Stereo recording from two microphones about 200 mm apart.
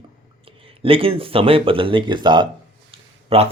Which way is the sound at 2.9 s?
30° right (ahead or behind).